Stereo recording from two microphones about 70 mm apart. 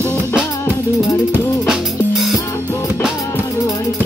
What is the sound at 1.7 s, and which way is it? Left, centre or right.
Music, centre.